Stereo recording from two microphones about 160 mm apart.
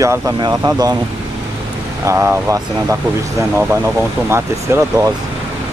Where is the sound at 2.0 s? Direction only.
15° right (ahead or behind).